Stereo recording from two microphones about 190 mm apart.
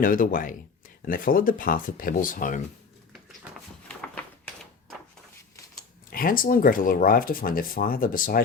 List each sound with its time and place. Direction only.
0.0 s speech: 45° left (ahead or behind)
3.1 s a sound: centre (ahead or behind)
6.1 s speech: 50° left (ahead or behind)